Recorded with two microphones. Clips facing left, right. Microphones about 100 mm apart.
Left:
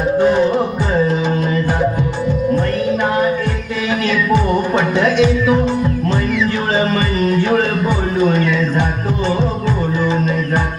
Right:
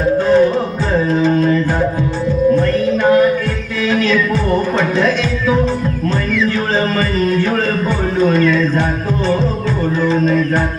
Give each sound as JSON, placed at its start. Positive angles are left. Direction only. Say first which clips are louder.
{"t": 0.2, "sound": "music", "louder": "even", "side_deg": 15}
{"t": 10.0, "sound": "music", "louder": "right 3 dB", "side_deg": 15}